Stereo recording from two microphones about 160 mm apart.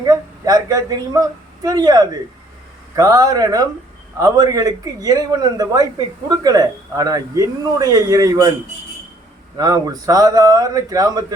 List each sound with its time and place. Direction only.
0.0 s a man's voice: 25° right (ahead or behind)
9.6 s a man's voice: 25° right (ahead or behind)